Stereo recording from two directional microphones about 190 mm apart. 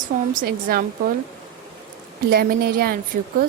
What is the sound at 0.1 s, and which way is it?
Speech, 45° right (ahead or behind).